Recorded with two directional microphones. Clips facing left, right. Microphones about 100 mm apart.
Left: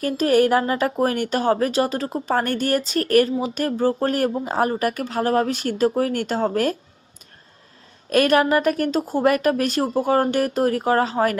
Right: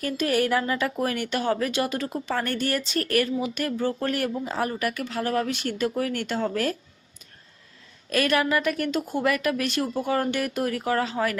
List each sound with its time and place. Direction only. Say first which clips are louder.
0.0 s speech: left 7 dB; 40° left (ahead or behind)
8.1 s speech: left 6 dB; 45° left (ahead or behind)